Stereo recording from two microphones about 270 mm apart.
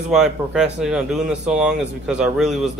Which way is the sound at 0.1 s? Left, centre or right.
Centre.